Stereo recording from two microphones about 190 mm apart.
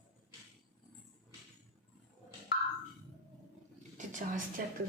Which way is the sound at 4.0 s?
40° right (ahead or behind).